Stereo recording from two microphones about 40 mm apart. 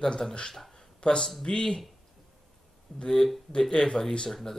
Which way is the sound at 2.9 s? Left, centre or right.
Left.